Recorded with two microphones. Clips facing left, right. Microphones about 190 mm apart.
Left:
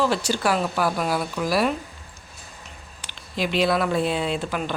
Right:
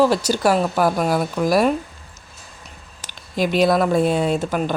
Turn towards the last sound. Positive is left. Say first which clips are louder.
# right 5 dB
turn(degrees=-45)  # may be behind; listen again after turning